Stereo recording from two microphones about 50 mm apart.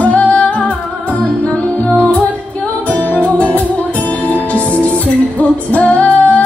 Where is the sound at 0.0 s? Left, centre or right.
Left.